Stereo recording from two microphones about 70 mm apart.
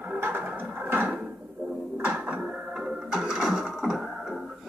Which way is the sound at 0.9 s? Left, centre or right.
Right.